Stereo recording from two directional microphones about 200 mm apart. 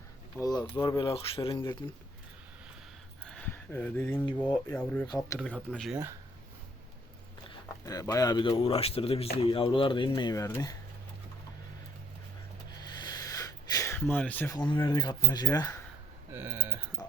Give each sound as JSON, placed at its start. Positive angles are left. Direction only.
{"t": 0.4, "sound": "speech", "side_deg": 20}
{"t": 3.2, "sound": "a sound", "side_deg": 5}
{"t": 4.5, "sound": "speech", "side_deg": 5}
{"t": 5.0, "sound": "speech", "side_deg": 20}
{"t": 5.4, "sound": "speech", "side_deg": 5}
{"t": 7.9, "sound": "speech", "side_deg": 15}
{"t": 12.7, "sound": "a sound", "side_deg": 20}
{"t": 14.5, "sound": "speech", "side_deg": 20}
{"t": 16.3, "sound": "a sound", "side_deg": -10}
{"t": 17.0, "sound": "music", "side_deg": 15}